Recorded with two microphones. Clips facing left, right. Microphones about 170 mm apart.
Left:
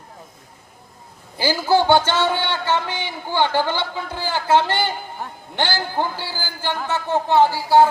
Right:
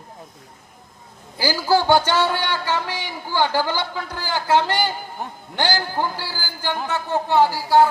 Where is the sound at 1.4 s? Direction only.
20° left (ahead or behind).